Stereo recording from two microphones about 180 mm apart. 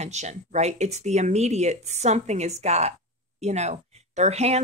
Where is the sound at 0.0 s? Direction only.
40° right (ahead or behind).